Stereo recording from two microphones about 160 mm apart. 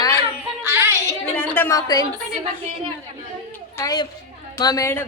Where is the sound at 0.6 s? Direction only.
15° right (ahead or behind).